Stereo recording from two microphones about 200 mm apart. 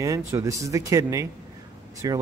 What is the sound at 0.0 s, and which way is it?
Speech, 15° right (ahead or behind).